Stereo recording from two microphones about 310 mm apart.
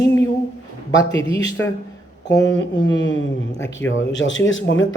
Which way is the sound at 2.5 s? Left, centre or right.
Left.